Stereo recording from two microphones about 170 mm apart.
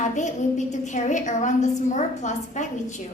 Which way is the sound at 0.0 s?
45° left (ahead or behind).